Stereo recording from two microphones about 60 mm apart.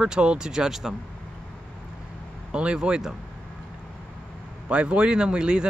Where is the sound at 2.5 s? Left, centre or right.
Centre.